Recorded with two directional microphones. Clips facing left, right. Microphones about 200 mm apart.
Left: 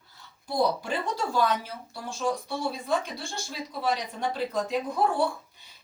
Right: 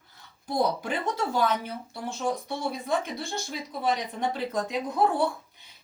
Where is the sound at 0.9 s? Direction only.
20° right (ahead or behind).